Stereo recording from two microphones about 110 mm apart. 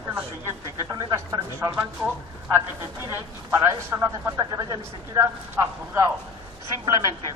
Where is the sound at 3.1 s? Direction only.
25° right (ahead or behind).